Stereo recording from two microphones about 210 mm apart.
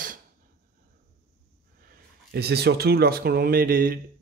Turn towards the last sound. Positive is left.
turn(degrees=-45)  # may be behind; listen again after turning